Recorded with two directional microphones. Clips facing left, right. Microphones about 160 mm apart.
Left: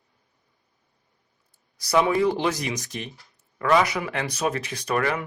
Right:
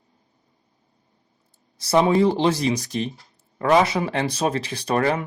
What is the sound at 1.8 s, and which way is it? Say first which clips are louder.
Speech: right 3 dB; 30° right (ahead or behind).